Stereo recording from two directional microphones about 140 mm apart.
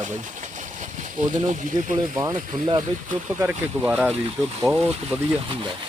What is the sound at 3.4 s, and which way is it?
Speech, 10° right (ahead or behind).